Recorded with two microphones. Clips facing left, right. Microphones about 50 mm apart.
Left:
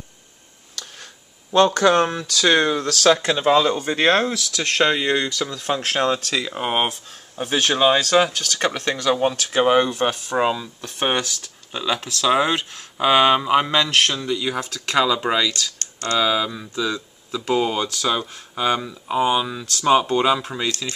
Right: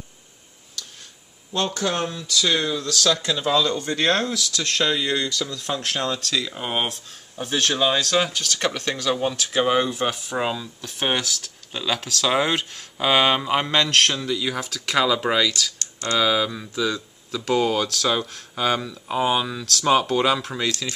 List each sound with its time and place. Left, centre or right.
1.5 s speech: left; by 7.7 s centre
7.7 s speech: left
9.8 s speech: centre